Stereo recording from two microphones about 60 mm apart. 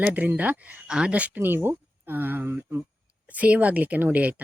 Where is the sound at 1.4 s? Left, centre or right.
Right.